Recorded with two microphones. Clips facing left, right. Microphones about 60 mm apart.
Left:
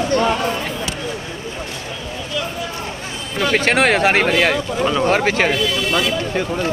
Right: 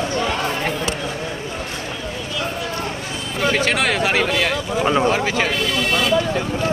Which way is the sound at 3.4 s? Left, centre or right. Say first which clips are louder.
Left 3 dB; left.